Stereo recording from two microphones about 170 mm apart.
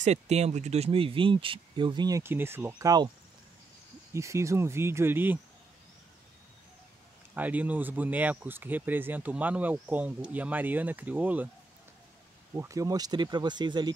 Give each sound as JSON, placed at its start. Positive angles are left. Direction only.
{"t": 0.0, "sound": "speech", "side_deg": -40}
{"t": 4.1, "sound": "speech", "side_deg": -15}
{"t": 7.3, "sound": "speech", "side_deg": -10}
{"t": 12.5, "sound": "speech", "side_deg": -20}